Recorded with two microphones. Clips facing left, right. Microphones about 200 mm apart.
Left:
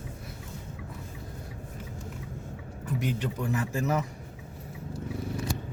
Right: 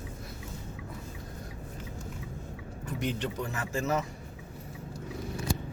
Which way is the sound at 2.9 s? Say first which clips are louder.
Left 1 dB; 10° left (ahead or behind).